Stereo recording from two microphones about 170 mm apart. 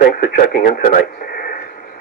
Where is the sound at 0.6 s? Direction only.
55° left (ahead or behind).